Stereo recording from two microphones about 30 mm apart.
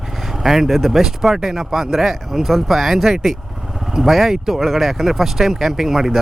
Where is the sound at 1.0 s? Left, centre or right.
Centre.